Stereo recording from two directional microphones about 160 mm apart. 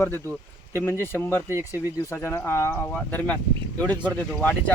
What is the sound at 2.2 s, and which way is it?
Speech, 15° left (ahead or behind).